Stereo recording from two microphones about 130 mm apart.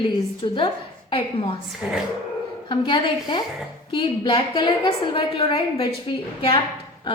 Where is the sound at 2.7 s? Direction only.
40° left (ahead or behind).